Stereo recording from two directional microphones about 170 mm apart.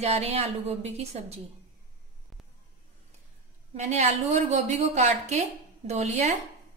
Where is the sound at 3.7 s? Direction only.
40° right (ahead or behind).